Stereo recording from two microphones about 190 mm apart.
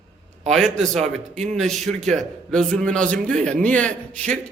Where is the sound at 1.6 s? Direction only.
Centre (ahead or behind).